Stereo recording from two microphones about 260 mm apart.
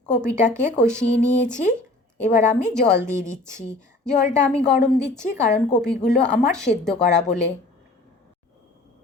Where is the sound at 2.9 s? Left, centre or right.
Centre.